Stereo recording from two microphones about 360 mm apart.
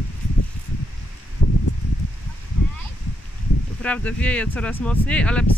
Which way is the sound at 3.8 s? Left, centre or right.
Centre.